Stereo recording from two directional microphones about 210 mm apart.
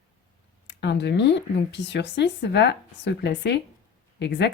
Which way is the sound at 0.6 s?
55° left (ahead or behind).